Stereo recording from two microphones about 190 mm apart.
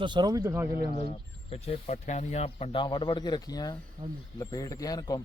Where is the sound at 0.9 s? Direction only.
35° left (ahead or behind).